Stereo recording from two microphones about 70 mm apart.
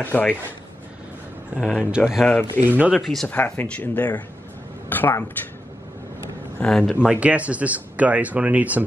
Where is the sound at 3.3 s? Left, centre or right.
Left.